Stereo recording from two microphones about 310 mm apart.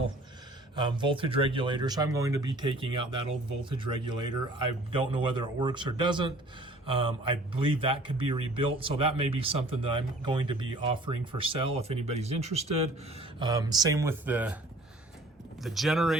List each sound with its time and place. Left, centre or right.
0.8 s speech: centre
15.6 s speech: centre